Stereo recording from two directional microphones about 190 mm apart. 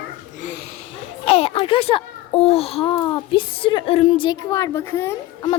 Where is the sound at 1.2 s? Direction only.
30° left (ahead or behind).